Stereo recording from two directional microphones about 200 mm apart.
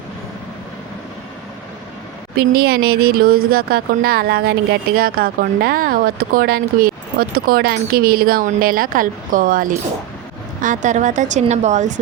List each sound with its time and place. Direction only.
2.5 s speech: 50° right (ahead or behind)